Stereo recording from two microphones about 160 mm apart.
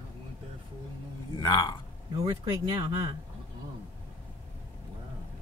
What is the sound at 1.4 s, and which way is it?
Speech, 20° left (ahead or behind).